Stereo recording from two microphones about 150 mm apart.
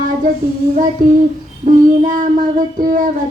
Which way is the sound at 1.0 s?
75° right (ahead or behind).